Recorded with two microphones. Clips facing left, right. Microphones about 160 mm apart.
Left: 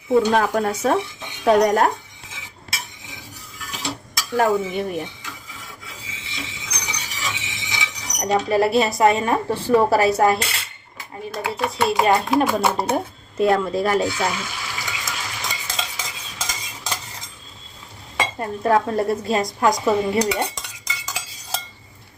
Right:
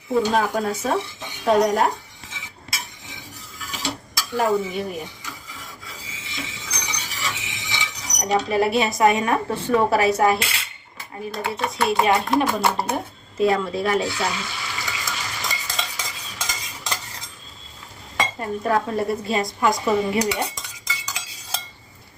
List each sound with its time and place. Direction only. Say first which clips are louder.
0.1 s speech: left 3 dB; centre (ahead or behind)
2.3 s cutlery: left 1 dB; centre (ahead or behind)
3.7 s dishes: even; centre (ahead or behind)
6.3 s chink: right 1 dB; centre (ahead or behind)
9.0 s a woman's voice: right 1 dB; 30° left (ahead or behind)
9.7 s speech: left 2 dB; 5° left (ahead or behind)
10.5 s cutlery: left 1 dB; centre (ahead or behind)
11.4 s speech: left 2 dB; centre (ahead or behind)
14.8 s stir: even; centre (ahead or behind)
18.6 s speech: left 4 dB; centre (ahead or behind)
19.6 s cutlery: left 2 dB; centre (ahead or behind)